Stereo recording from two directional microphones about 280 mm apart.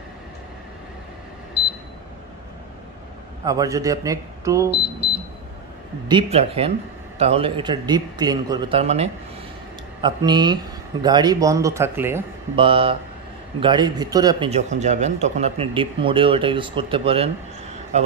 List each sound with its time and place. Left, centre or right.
3.4 s speech: centre
6.0 s speech: centre
12.6 s speech: centre